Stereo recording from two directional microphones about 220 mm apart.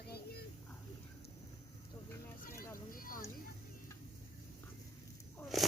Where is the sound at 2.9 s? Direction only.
40° left (ahead or behind).